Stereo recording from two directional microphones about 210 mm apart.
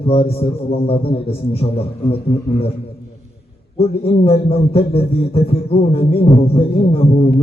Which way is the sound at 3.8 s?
25° left (ahead or behind).